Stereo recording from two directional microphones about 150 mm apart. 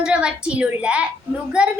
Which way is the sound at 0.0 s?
5° right (ahead or behind).